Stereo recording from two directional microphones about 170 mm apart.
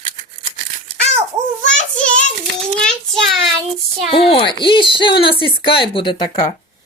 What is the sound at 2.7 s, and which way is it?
Child singing, 5° left (ahead or behind).